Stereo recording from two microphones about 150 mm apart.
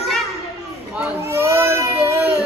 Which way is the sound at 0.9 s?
10° right (ahead or behind).